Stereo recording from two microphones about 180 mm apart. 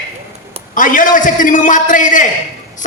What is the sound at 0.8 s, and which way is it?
A man's voice, 50° left (ahead or behind).